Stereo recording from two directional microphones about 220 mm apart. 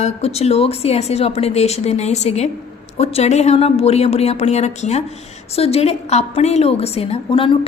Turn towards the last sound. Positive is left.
turn(degrees=25)  # may be behind; listen again after turning